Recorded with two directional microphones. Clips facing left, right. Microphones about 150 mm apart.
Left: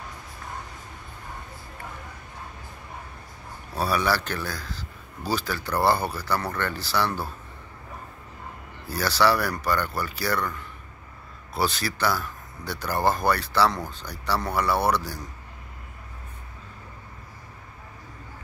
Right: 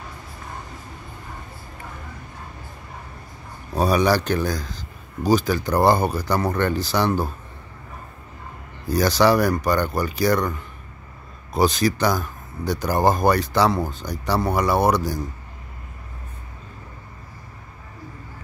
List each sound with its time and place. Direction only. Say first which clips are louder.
3.7 s a man's voice: right 6 dB; 15° right (ahead or behind)
8.8 s a man's voice: right 5 dB; 15° right (ahead or behind)